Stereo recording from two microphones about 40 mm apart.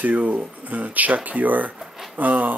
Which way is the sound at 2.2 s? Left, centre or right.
Right.